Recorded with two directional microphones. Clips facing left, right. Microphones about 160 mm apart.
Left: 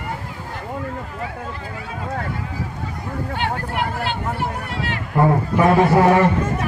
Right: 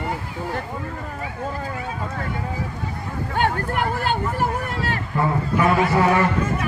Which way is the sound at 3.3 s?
45° right (ahead or behind).